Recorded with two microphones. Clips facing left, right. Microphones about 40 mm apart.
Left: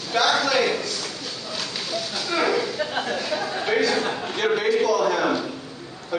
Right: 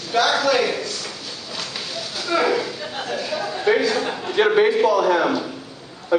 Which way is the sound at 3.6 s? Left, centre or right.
Centre.